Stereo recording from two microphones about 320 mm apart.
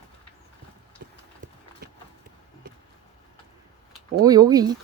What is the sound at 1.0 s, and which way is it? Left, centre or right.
Horse, right.